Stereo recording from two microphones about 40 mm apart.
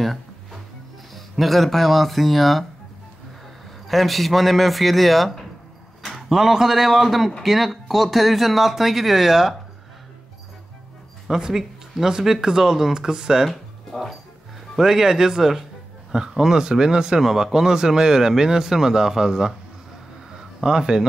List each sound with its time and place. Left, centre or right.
0.0 s music: centre
1.1 s speech: centre
3.8 s speech: centre
6.1 s speech: centre
11.3 s speech: centre
13.9 s speech: centre
14.8 s speech: centre
20.3 s a sound: centre